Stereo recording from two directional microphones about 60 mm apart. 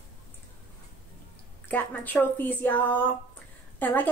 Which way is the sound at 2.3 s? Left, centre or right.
Left.